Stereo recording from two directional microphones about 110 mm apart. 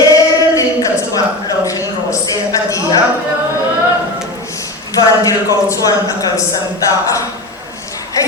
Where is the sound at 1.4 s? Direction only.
30° left (ahead or behind).